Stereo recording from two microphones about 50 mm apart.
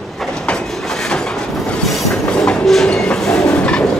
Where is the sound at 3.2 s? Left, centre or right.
Centre.